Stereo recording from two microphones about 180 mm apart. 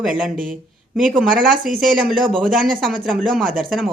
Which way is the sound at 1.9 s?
5° right (ahead or behind).